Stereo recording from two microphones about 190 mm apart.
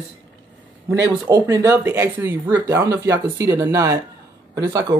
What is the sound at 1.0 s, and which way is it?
Speech, 15° right (ahead or behind).